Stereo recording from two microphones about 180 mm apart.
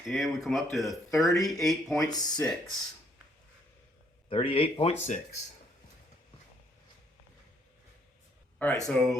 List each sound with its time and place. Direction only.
0.1 s speech: centre (ahead or behind)
2.0 s speech: 20° left (ahead or behind)
2.4 s speech: 5° left (ahead or behind)
4.3 s speech: 30° left (ahead or behind)
8.5 s speech: 5° left (ahead or behind)